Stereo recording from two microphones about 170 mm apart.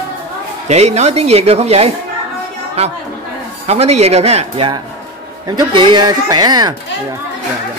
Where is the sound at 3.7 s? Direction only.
40° right (ahead or behind).